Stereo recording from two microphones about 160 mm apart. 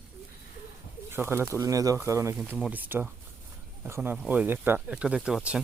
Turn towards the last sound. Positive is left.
turn(degrees=-5)  # may be behind; listen again after turning